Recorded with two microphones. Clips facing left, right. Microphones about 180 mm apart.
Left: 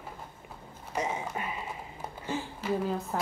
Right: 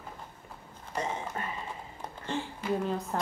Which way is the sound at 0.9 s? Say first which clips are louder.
Left 1 dB; 10° left (ahead or behind).